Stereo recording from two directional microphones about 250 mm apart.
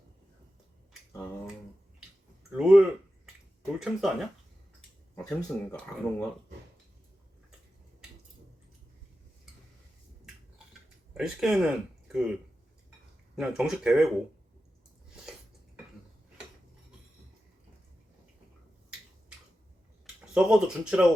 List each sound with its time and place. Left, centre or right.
2.6 s a sound: centre
3.8 s speech: centre
11.1 s speech: centre
13.3 s speech: centre
15.1 s a sound: centre
20.3 s speech: centre